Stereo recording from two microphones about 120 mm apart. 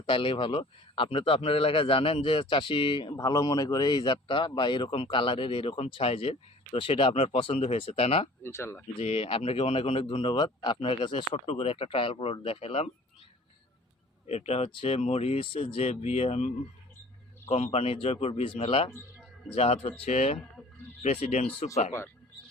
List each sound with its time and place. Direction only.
0.0 s a man's voice: 45° left (ahead or behind)
3.1 s a man's voice: 30° left (ahead or behind); by 8.3 s 55° left (ahead or behind)
8.4 s speech: 20° left (ahead or behind)
9.0 s a man's voice: 55° left (ahead or behind); by 10.8 s 35° left (ahead or behind)
10.8 s a man's voice: 50° left (ahead or behind)
14.3 s speech: 60° left (ahead or behind)
17.5 s speech: 60° left (ahead or behind)